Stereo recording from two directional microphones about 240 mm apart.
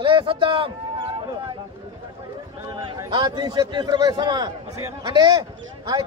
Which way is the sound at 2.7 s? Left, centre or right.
Centre.